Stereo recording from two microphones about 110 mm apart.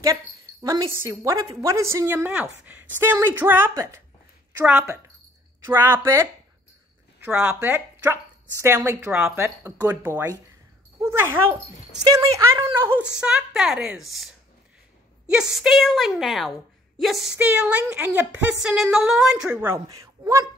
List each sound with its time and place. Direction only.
0.0 s a sound: 30° right (ahead or behind)
0.9 s speech: 25° right (ahead or behind)
7.2 s speech: 15° right (ahead or behind)
12.0 s speech: 35° right (ahead or behind)
13.2 s a woman's voice: 5° right (ahead or behind)
19.9 s speech: 30° right (ahead or behind)